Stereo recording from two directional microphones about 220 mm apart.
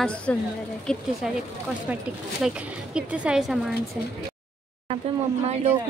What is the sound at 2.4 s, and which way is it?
Speech, 5° right (ahead or behind).